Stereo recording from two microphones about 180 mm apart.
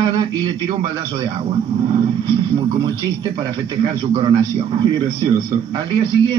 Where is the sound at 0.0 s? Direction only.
30° right (ahead or behind).